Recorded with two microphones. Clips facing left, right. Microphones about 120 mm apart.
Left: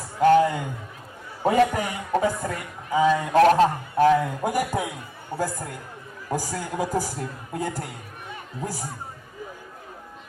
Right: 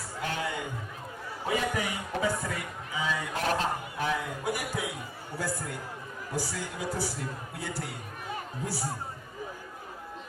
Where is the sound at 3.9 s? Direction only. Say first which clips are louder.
Left 13 dB; 65° left (ahead or behind).